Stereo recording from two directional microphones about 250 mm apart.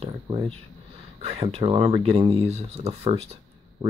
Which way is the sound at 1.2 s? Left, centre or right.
Right.